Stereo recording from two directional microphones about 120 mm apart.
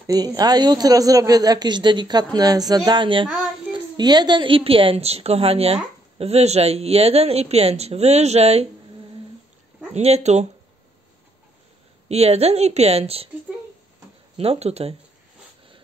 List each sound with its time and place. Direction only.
0.0 s a woman's voice: 30° right (ahead or behind); by 8.6 s 60° right (ahead or behind)
9.9 s speech: 65° right (ahead or behind)
12.1 s a woman's voice: 60° right (ahead or behind)
14.3 s a woman's voice: 55° right (ahead or behind)